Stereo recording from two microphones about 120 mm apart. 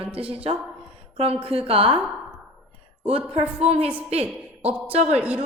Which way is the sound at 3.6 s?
55° right (ahead or behind).